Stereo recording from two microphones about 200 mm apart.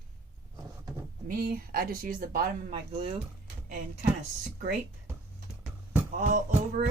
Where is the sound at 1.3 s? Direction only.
45° right (ahead or behind).